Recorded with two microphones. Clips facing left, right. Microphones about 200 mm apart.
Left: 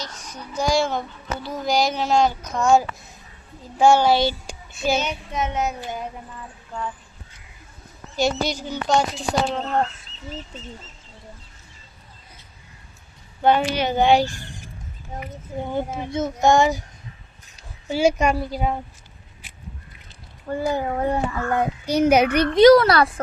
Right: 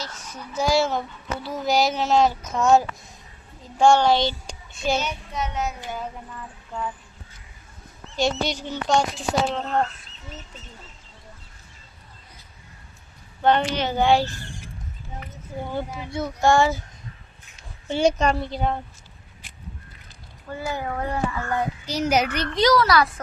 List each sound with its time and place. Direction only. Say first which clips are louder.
0.0 s a woman's voice: left 1 dB; 5° right (ahead or behind)
4.9 s child singing: left 3 dB; 20° left (ahead or behind)
8.1 s a woman's voice: left 2 dB; centre (ahead or behind)
13.4 s a woman's voice: left 2 dB; 10° left (ahead or behind)
15.6 s child singing: left 4 dB; 20° left (ahead or behind)
17.8 s a woman's voice: left 1 dB; 5° left (ahead or behind)
20.5 s a child's voice: left 6 dB; 45° left (ahead or behind)
20.7 s child singing: left 5 dB; 25° left (ahead or behind)
21.8 s a child's voice: left 7 dB; 60° left (ahead or behind)